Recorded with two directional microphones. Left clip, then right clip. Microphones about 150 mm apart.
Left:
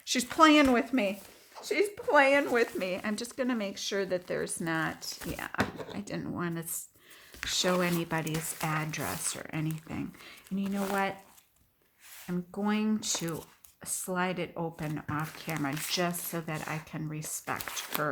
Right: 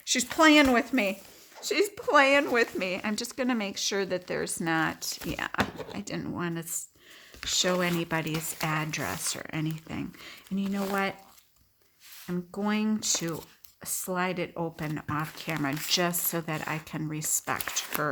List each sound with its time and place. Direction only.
0.0 s speech: centre (ahead or behind)
1.6 s a woman's voice: 35° right (ahead or behind)
12.3 s a woman's voice: 30° right (ahead or behind)